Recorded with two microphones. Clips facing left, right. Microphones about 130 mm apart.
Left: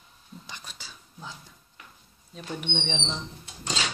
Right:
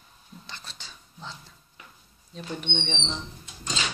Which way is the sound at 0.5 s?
15° left (ahead or behind).